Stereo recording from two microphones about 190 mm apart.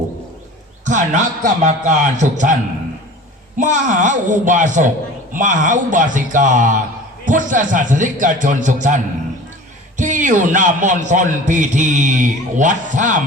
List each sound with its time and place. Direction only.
0.9 s a man's voice: 40° right (ahead or behind)
3.6 s a man's voice: 40° right (ahead or behind)
10.0 s a man's voice: 40° right (ahead or behind)